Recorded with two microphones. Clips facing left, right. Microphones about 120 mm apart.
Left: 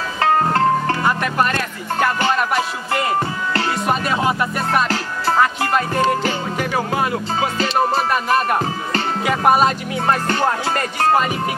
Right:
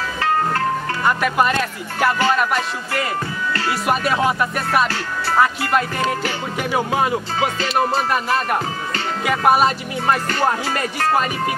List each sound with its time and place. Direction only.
0.2 s music: 35° left (ahead or behind)
1.0 s music: 5° right (ahead or behind)
2.9 s music: 25° left (ahead or behind)
3.8 s speech: 5° right (ahead or behind)
6.6 s speech: 15° right (ahead or behind)
9.2 s speech: centre (ahead or behind)